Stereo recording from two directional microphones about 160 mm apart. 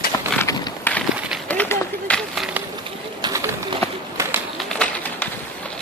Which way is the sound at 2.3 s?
5° right (ahead or behind).